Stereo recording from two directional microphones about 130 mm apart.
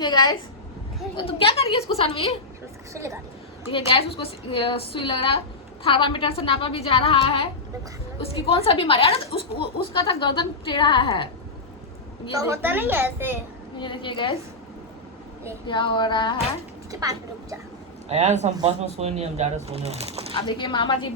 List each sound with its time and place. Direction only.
0.0 s speech: 35° left (ahead or behind)
1.1 s a woman's voice: 45° left (ahead or behind)
2.9 s a child's voice: 25° right (ahead or behind)
3.7 s a woman's voice: 45° left (ahead or behind)
12.4 s a woman's voice: 20° right (ahead or behind)
13.7 s speech: 40° left (ahead or behind)
15.6 s speech: 35° left (ahead or behind)
16.9 s a child's voice: 25° right (ahead or behind)
18.1 s speech: 60° right (ahead or behind)
20.5 s speech: 35° left (ahead or behind)